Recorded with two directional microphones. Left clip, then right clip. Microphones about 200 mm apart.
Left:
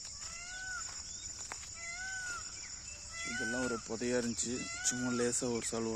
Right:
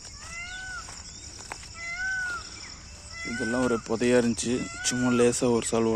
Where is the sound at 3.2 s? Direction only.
15° left (ahead or behind).